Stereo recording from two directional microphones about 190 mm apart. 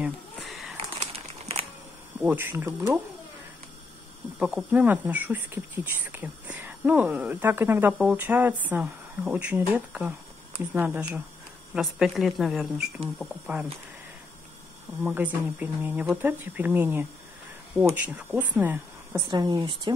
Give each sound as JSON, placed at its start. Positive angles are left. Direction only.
{"t": 0.0, "sound": "a sound", "side_deg": 0}
{"t": 1.1, "sound": "crumpling", "side_deg": -30}
{"t": 2.1, "sound": "speech", "side_deg": -10}
{"t": 4.4, "sound": "speech", "side_deg": -5}
{"t": 15.0, "sound": "speech", "side_deg": -5}
{"t": 19.2, "sound": "speech", "side_deg": -20}